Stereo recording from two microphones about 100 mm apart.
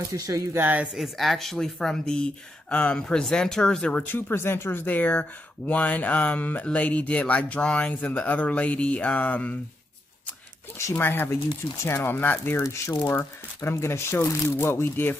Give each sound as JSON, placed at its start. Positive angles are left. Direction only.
{"t": 0.1, "sound": "speech", "side_deg": -30}
{"t": 0.6, "sound": "speech", "side_deg": -15}
{"t": 0.9, "sound": "speech", "side_deg": 0}
{"t": 4.1, "sound": "speech", "side_deg": 25}
{"t": 10.8, "sound": "speech", "side_deg": 25}
{"t": 12.6, "sound": "speech", "side_deg": 30}